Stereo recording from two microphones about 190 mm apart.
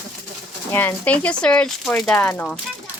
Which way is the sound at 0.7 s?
10° left (ahead or behind).